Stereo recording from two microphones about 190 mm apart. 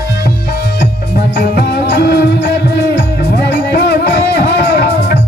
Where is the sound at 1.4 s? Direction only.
55° left (ahead or behind).